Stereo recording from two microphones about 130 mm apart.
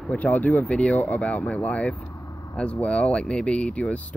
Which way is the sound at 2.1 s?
25° left (ahead or behind).